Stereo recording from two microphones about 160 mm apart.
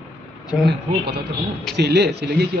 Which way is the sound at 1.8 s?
90° right.